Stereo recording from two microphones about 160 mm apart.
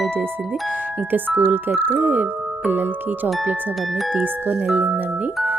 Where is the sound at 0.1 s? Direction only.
10° right (ahead or behind).